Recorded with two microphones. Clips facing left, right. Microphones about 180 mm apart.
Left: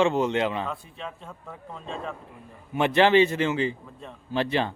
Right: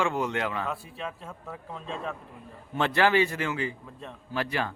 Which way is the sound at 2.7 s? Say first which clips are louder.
Left 4 dB; 20° left (ahead or behind).